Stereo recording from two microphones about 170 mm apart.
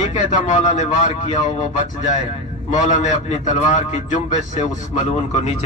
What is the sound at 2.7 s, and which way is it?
A man's voice, 45° left (ahead or behind).